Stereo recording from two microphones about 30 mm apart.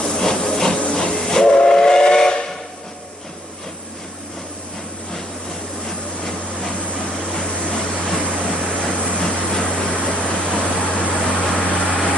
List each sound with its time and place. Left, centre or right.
0.2 s hiss: centre
1.2 s train: left
7.3 s a sound: left
11.3 s vehicle: left